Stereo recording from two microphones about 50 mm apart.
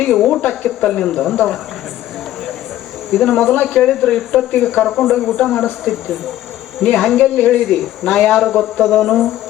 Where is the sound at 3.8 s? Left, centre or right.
Centre.